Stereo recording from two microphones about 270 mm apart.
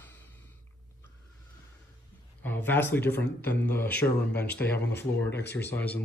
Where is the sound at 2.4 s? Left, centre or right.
Centre.